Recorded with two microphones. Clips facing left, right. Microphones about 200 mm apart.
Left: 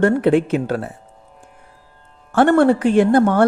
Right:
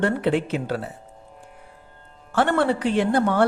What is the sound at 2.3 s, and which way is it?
Speech, 50° left (ahead or behind).